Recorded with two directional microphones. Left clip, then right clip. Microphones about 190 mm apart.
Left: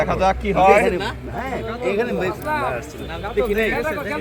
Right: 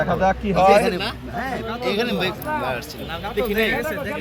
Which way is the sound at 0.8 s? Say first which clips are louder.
Left 2 dB; 40° left (ahead or behind).